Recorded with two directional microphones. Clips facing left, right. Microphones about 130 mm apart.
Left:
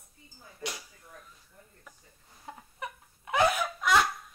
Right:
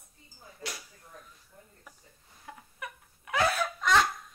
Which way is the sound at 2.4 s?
25° left (ahead or behind).